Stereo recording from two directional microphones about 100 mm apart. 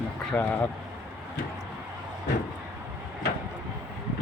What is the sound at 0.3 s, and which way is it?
Speech, 15° left (ahead or behind).